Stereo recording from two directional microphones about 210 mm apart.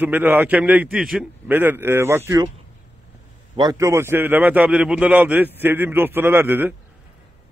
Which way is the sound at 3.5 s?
15° right (ahead or behind).